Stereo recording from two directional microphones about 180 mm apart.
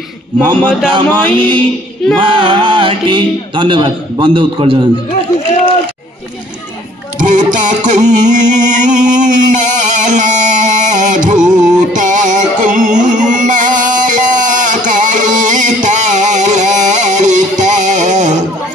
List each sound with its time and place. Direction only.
0.6 s a man's voice: 5° left (ahead or behind)
0.9 s speech: 25° right (ahead or behind)
7.2 s music: 45° right (ahead or behind)